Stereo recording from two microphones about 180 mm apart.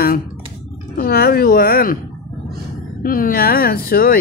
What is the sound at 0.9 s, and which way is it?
A woman's voice, 60° left (ahead or behind).